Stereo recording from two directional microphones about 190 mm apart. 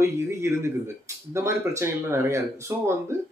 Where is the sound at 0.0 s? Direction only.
15° right (ahead or behind).